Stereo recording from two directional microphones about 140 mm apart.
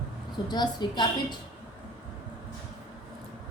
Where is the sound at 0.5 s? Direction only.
30° left (ahead or behind).